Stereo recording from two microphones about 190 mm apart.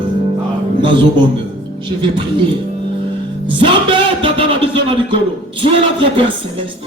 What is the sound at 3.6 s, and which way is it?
Music, 25° right (ahead or behind).